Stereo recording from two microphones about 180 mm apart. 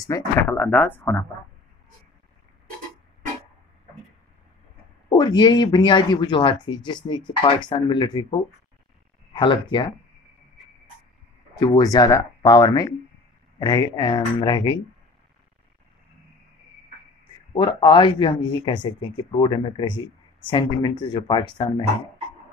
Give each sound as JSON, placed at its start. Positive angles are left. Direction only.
{"t": 0.0, "sound": "speech", "side_deg": 15}
{"t": 5.1, "sound": "speech", "side_deg": 25}
{"t": 11.5, "sound": "speech", "side_deg": 25}
{"t": 17.5, "sound": "speech", "side_deg": 25}